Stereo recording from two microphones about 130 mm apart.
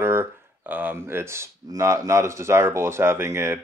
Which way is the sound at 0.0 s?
15° right (ahead or behind).